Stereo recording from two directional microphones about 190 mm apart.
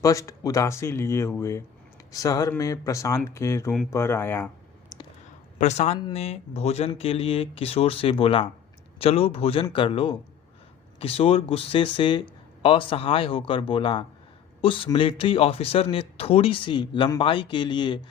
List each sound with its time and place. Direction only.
0.0 s speech: 15° left (ahead or behind)
5.5 s speech: 35° left (ahead or behind)